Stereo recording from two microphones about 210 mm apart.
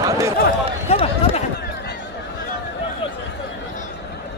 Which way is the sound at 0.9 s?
30° left (ahead or behind).